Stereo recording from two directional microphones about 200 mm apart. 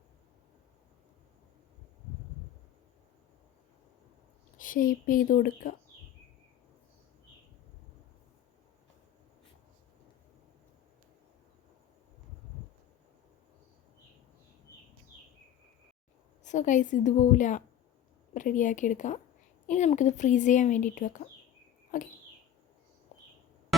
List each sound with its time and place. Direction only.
4.5 s speech: 45° left (ahead or behind)
16.4 s speech: 35° left (ahead or behind)
21.9 s a sound: 40° left (ahead or behind)